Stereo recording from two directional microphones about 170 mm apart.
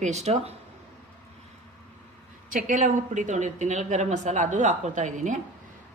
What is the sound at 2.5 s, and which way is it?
Speech, 50° right (ahead or behind).